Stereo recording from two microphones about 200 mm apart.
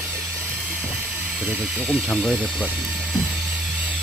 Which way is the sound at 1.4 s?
5° right (ahead or behind).